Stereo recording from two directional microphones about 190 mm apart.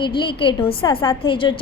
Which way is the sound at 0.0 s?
25° left (ahead or behind).